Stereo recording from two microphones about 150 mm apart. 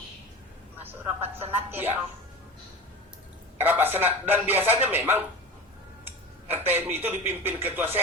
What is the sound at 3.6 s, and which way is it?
Speech, 15° right (ahead or behind).